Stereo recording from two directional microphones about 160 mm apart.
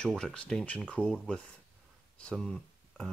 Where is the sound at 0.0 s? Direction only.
5° left (ahead or behind).